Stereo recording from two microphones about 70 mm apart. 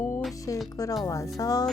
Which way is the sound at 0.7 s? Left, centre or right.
Left.